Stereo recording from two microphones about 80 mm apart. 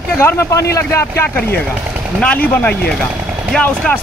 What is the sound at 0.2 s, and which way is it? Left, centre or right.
Speech, left.